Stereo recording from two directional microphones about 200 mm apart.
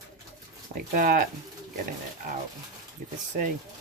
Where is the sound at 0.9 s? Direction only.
45° right (ahead or behind).